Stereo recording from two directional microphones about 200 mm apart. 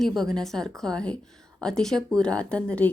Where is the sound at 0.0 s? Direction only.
Centre (ahead or behind).